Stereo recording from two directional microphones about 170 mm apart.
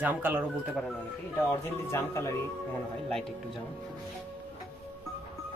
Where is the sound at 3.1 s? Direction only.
Centre (ahead or behind).